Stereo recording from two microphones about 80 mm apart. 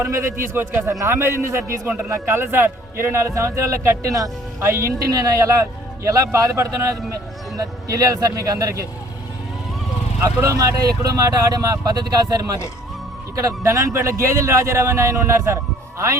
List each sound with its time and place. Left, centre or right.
0.0 s a man's voice: right
0.9 s a man's voice: right
10.4 s a man's voice: right